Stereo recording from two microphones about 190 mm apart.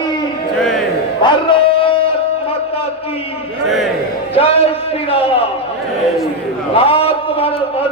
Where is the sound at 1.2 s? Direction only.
25° left (ahead or behind).